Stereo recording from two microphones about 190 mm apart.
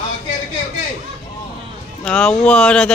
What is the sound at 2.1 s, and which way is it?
Speech, 5° left (ahead or behind).